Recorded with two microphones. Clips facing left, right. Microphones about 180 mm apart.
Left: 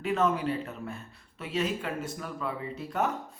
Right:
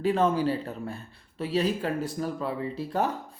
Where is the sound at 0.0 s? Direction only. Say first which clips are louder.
Right 4 dB; 30° right (ahead or behind).